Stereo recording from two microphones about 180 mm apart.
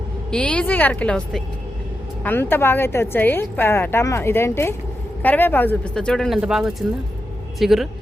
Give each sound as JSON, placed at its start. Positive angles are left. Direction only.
{"t": 0.3, "sound": "a woman's voice", "side_deg": 5}